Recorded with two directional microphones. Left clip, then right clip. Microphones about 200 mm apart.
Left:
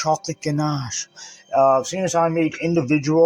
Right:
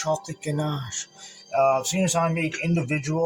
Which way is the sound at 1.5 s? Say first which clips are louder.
Left 5 dB; 50° left (ahead or behind).